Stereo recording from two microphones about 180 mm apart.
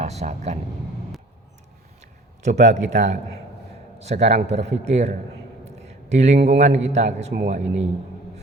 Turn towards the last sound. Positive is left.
turn(degrees=-35)  # may be behind; listen again after turning